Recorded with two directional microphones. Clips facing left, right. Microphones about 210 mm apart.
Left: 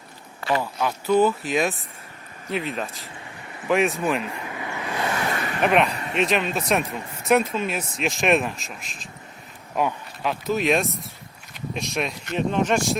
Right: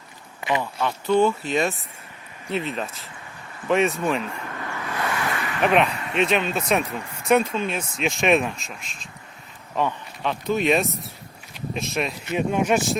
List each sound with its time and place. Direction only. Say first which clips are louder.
0.6 s speech: even; 5° left (ahead or behind)
4.4 s vehicle: left 1 dB; 15° left (ahead or behind)
5.3 s vehicle: left 1 dB; 40° left (ahead or behind)
5.6 s speech: even; centre (ahead or behind)